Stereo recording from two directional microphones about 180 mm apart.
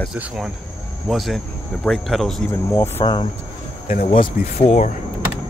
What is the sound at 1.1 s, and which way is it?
Speech, centre (ahead or behind).